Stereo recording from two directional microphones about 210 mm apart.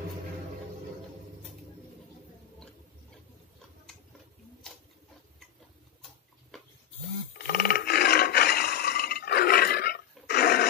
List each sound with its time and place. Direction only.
7.3 s roar: 45° left (ahead or behind)